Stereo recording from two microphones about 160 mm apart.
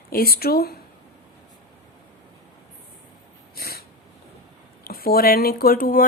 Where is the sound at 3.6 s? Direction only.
75° left (ahead or behind).